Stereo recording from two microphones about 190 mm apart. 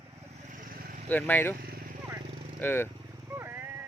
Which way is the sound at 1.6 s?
50° right (ahead or behind).